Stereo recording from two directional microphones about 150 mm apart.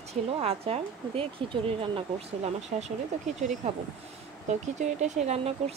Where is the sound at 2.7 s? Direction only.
55° right (ahead or behind).